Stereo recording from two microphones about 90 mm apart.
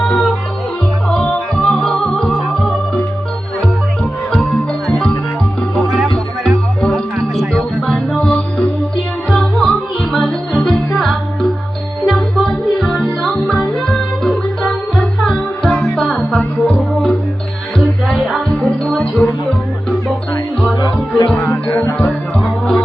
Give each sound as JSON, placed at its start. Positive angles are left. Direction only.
{"t": 0.1, "sound": "music", "side_deg": 10}
{"t": 4.9, "sound": "music", "side_deg": 5}
{"t": 21.4, "sound": "music", "side_deg": 20}
{"t": 21.9, "sound": "music", "side_deg": 10}